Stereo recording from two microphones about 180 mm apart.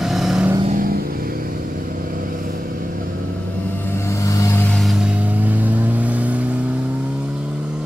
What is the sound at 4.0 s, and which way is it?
Vehicle, 15° left (ahead or behind).